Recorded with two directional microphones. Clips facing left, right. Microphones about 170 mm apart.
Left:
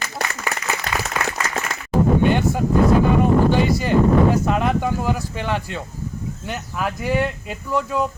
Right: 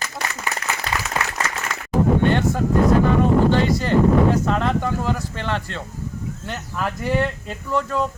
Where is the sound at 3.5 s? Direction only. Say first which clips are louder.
Even; 10° left (ahead or behind).